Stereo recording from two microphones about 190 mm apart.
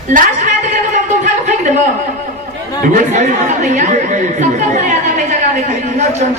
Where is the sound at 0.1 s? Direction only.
45° right (ahead or behind).